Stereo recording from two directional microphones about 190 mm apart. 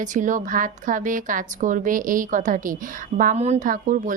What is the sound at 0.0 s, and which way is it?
Speech, 40° right (ahead or behind).